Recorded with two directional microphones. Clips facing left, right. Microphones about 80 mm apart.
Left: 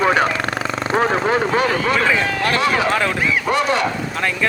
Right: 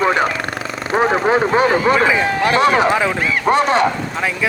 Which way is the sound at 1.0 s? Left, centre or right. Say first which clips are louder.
Right 3 dB; centre.